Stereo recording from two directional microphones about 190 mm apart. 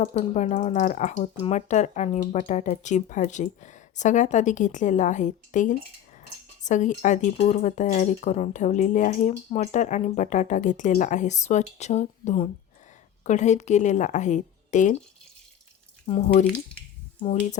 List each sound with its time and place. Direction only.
0.0 s speech: 35° left (ahead or behind)
16.0 s speech: 30° left (ahead or behind)